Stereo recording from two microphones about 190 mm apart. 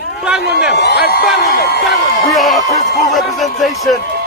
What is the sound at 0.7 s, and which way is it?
Speech, 60° left (ahead or behind).